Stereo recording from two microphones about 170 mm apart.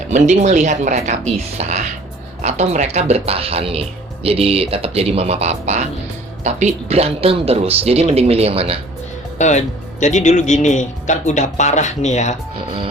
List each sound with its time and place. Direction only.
0.1 s speech: 45° right (ahead or behind)
9.4 s speech: 45° left (ahead or behind)